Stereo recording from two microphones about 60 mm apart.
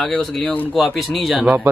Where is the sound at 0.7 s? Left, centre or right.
Centre.